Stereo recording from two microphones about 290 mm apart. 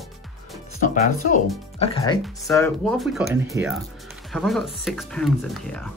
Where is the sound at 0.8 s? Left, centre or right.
Left.